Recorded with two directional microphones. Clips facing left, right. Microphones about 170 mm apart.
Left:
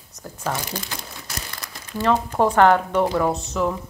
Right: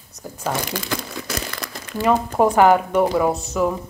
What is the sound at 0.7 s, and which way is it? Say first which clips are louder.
Crumpling: right 6 dB; 85° right.